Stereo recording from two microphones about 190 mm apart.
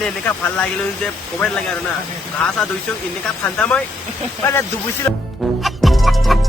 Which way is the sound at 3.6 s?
5° left (ahead or behind).